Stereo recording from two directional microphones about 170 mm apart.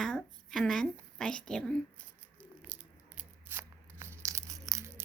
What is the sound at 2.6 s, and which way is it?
Tearing, 10° right (ahead or behind).